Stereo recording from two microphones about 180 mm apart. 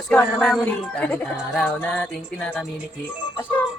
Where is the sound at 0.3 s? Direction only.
Centre (ahead or behind).